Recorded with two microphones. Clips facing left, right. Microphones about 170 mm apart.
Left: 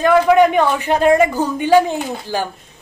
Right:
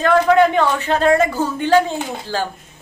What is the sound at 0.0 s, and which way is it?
A man's voice, 10° left (ahead or behind).